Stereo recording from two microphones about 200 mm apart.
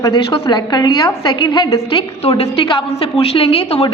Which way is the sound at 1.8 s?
30° left (ahead or behind).